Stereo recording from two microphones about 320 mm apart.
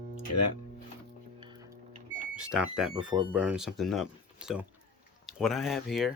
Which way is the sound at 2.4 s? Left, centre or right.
Centre.